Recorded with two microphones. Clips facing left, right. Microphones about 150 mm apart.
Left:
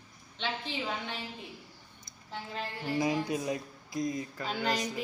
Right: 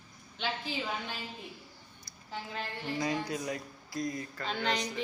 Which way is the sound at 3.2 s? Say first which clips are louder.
Left 3 dB; 20° left (ahead or behind).